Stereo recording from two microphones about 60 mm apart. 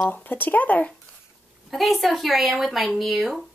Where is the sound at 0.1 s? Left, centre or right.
Left.